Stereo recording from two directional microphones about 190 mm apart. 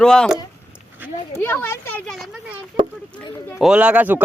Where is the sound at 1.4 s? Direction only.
10° left (ahead or behind).